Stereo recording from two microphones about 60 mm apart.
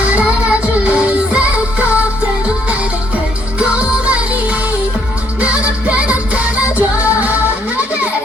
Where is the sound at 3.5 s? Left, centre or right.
Right.